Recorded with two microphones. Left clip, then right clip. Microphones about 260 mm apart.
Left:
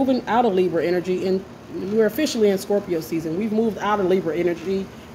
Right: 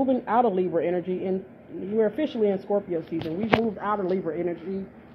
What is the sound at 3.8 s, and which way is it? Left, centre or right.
Speech, centre.